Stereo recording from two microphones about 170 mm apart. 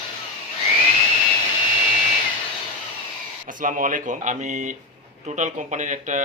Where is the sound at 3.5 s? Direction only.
50° right (ahead or behind).